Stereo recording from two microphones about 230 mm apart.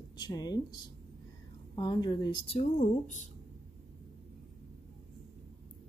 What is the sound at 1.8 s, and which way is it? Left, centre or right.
A woman's voice, centre.